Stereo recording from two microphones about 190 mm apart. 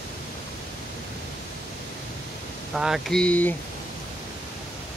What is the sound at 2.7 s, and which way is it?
Speech, 5° right (ahead or behind).